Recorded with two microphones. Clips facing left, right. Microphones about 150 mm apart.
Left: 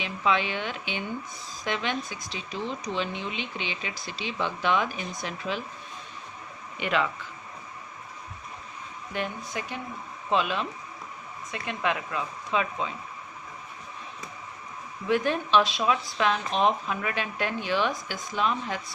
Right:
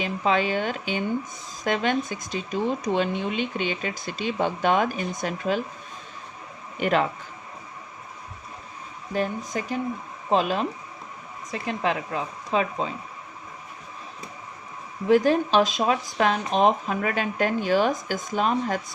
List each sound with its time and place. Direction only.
0.0 s speech: 40° right (ahead or behind)
6.7 s speech: 40° right (ahead or behind)
9.1 s speech: 40° right (ahead or behind)
15.0 s speech: 40° right (ahead or behind)